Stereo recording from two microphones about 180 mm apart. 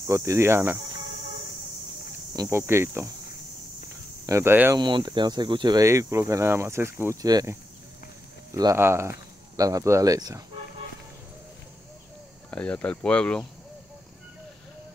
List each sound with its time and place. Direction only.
0.0 s speech: 15° right (ahead or behind)
2.3 s speech: 15° right (ahead or behind)
4.3 s speech: 15° right (ahead or behind)
4.7 s speech: 25° right (ahead or behind)
8.5 s speech: 15° right (ahead or behind)
12.4 s speech: 5° left (ahead or behind)